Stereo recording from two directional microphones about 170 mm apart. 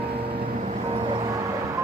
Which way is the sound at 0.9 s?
30° right (ahead or behind).